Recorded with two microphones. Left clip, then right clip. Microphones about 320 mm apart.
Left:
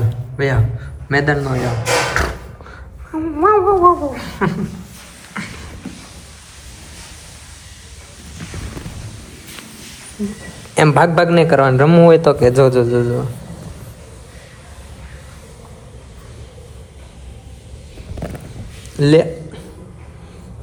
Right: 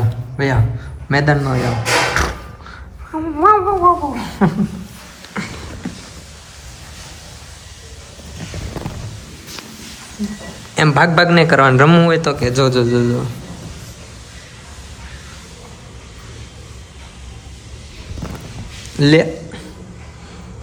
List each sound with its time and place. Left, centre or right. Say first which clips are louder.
0.3 s speech: even; centre
5.3 s music: right 2 dB; centre
10.8 s a man's voice: left 1 dB; centre
18.9 s a sound: even; centre